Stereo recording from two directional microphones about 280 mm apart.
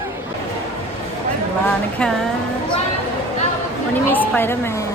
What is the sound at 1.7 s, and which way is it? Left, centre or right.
Speech, centre.